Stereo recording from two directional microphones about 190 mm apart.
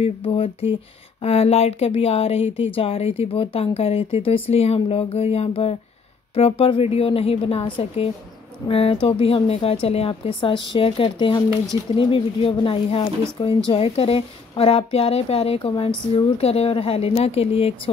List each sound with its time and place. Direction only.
0.0 s speech: 30° left (ahead or behind)